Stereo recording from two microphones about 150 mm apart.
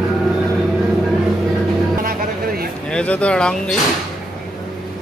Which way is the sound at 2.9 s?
5° left (ahead or behind).